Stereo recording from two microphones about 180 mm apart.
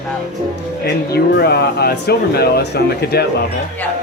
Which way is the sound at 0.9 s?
65° left (ahead or behind).